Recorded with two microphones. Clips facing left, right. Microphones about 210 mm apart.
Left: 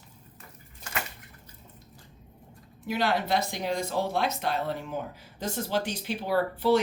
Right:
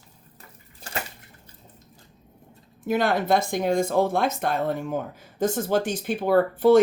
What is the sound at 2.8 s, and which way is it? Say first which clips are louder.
Speech: right 5 dB; 50° right (ahead or behind).